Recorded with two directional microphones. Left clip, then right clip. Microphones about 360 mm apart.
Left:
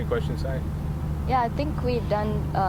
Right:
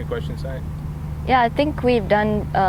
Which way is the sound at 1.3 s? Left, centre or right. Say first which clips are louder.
Right 8 dB; right.